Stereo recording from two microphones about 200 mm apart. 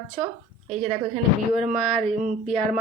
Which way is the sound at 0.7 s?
30° right (ahead or behind).